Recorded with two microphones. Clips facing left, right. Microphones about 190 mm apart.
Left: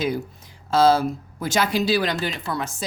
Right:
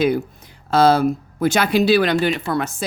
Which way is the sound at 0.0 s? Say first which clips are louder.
Right 7 dB; 60° right (ahead or behind).